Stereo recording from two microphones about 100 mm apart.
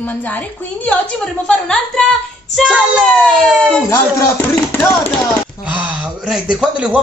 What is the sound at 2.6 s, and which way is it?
Speech, 10° right (ahead or behind).